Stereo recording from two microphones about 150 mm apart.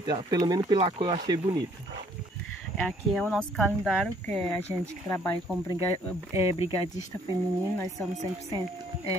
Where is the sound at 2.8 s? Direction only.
5° left (ahead or behind).